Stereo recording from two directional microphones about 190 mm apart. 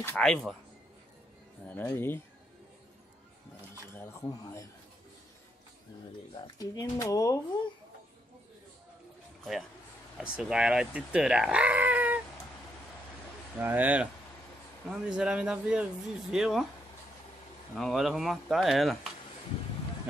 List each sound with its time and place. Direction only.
0.0 s speech: 5° left (ahead or behind)
1.7 s speech: 10° left (ahead or behind)
3.9 s speech: 15° left (ahead or behind)
6.4 s speech: 20° left (ahead or behind)
9.4 s speech: centre (ahead or behind)
13.6 s speech: 10° right (ahead or behind)
17.7 s speech: centre (ahead or behind)